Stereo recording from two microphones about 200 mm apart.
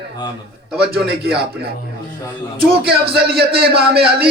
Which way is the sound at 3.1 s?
50° right (ahead or behind).